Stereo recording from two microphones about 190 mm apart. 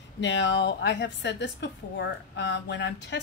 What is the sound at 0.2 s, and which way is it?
A woman's voice, 70° left (ahead or behind).